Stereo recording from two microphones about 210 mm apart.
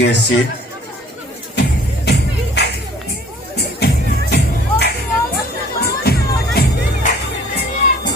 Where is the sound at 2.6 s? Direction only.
55° left (ahead or behind).